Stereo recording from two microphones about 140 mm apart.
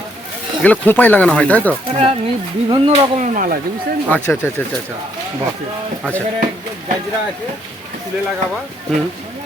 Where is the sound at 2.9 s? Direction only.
55° right (ahead or behind); by 3.5 s 70° right (ahead or behind).